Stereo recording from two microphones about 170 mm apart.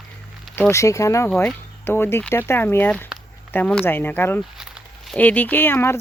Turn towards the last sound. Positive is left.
turn(degrees=15)  # may be behind; listen again after turning